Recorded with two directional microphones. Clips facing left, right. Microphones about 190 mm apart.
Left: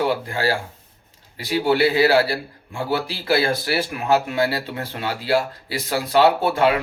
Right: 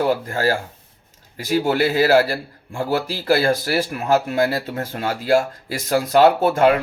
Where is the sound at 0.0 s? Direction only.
45° right (ahead or behind).